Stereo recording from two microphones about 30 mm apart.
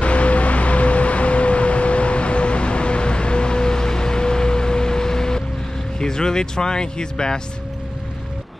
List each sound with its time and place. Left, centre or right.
0.0 s vehicle: left
5.9 s speech: left